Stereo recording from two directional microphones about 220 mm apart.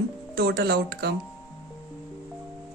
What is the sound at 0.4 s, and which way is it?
Speech, 45° right (ahead or behind).